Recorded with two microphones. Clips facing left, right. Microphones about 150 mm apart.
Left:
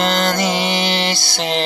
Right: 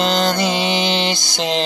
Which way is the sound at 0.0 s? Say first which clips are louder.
Even; 15° right (ahead or behind).